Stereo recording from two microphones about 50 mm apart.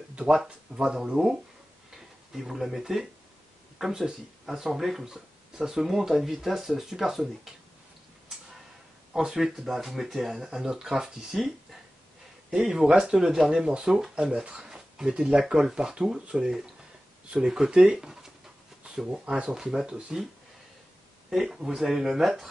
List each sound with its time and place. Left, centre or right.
0.3 s speech: centre
2.3 s speech: centre
9.1 s speech: centre
12.4 s speech: centre
14.3 s speech: right
15.3 s speech: centre
21.3 s speech: centre